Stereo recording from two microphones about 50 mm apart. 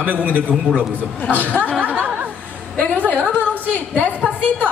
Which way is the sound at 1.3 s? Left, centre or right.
Left.